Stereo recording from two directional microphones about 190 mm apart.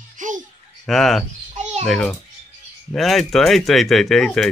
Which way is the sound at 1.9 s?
5° left (ahead or behind).